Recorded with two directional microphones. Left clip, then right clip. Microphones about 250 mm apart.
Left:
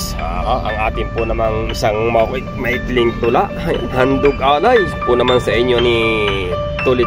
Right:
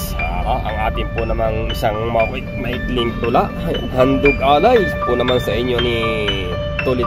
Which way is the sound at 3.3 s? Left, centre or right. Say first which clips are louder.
Left 2 dB; centre.